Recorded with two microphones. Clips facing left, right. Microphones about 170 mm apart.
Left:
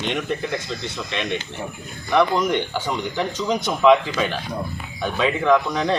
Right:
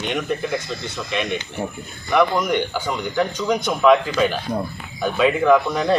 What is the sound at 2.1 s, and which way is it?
Speech, centre (ahead or behind).